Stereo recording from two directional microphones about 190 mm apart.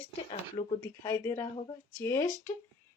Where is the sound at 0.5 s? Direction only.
15° left (ahead or behind).